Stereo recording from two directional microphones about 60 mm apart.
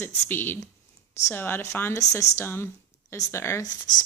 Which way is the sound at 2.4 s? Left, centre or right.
Left.